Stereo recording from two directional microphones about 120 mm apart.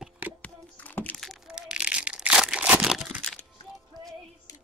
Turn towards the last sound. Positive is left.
turn(degrees=0)  # may be behind; listen again after turning